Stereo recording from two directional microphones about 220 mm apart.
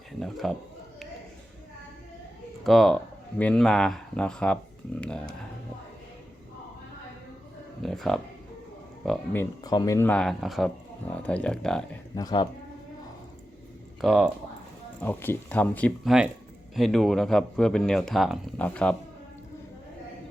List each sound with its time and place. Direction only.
0.2 s speech: centre (ahead or behind)
2.6 s speech: centre (ahead or behind)
7.8 s speech: centre (ahead or behind)
12.1 s speech: 20° left (ahead or behind)
14.0 s speech: centre (ahead or behind)
15.0 s speech: 10° left (ahead or behind)